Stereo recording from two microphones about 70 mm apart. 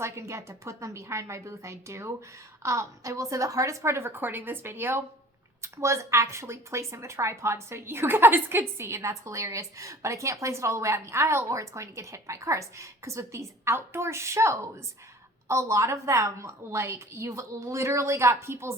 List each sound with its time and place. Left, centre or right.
0.0 s a woman's voice: right